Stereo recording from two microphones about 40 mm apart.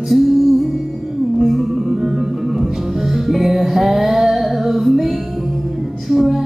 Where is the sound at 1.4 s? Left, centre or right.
Centre.